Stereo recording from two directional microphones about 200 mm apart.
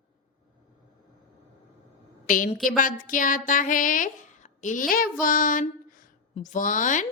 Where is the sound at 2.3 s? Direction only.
45° left (ahead or behind).